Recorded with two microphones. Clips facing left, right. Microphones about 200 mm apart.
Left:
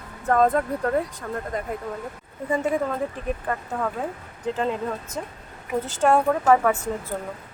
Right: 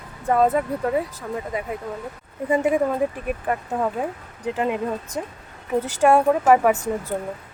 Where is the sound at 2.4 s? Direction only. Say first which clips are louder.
Right 4 dB; 15° right (ahead or behind).